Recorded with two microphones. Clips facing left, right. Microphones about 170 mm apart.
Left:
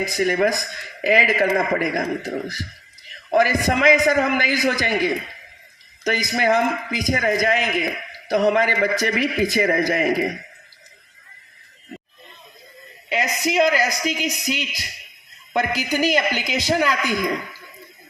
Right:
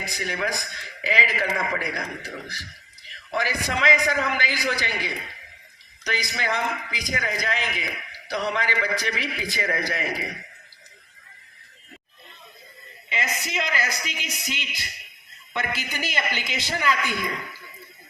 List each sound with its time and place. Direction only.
0.0 s a man's voice: 45° left (ahead or behind)
13.1 s a man's voice: 40° left (ahead or behind)